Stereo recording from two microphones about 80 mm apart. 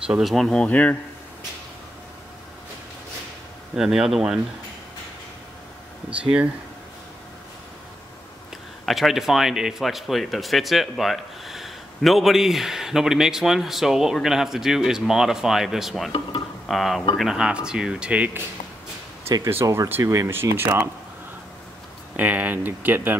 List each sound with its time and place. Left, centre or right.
0.0 s speech: centre
0.3 s speech: centre
0.7 s a man's voice: centre
3.7 s speech: centre
6.0 s speech: centre
8.8 s speech: centre
16.1 s speech: left
16.6 s speech: centre
19.6 s speech: right
22.1 s speech: centre